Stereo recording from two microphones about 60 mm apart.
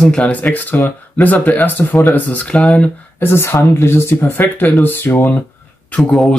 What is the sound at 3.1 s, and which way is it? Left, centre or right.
Speech, left.